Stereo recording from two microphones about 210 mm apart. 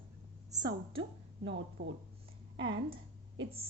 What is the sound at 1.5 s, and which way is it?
Speech, 60° right (ahead or behind).